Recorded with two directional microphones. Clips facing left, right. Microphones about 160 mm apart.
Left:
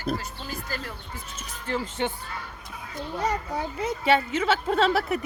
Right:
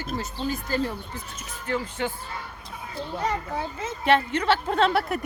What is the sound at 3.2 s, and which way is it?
Speech, 15° left (ahead or behind).